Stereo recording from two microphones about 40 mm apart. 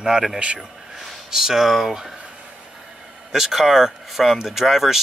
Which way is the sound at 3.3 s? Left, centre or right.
Centre.